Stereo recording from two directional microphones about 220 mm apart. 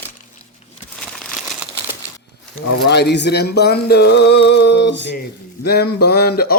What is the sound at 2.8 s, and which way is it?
Speech, 50° left (ahead or behind).